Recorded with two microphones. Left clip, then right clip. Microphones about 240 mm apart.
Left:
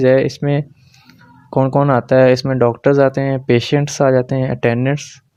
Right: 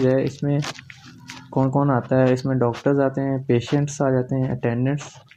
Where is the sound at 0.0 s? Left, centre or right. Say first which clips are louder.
Left 8 dB; left.